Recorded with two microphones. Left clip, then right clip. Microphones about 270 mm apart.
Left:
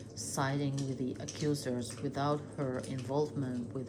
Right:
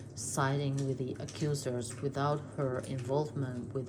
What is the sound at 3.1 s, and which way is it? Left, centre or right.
Speech, right.